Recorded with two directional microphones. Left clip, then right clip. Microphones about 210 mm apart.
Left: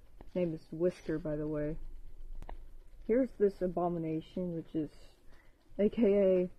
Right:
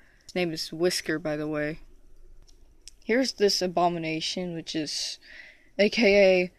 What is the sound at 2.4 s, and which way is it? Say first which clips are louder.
Chewing: left 12 dB; centre (ahead or behind).